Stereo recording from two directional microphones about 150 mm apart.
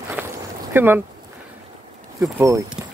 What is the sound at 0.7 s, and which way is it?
Speech, 15° right (ahead or behind).